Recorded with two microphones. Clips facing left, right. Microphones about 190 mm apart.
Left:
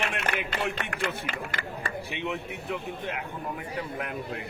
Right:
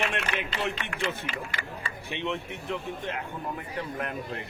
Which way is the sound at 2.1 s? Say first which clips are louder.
Right 5 dB; 5° left (ahead or behind).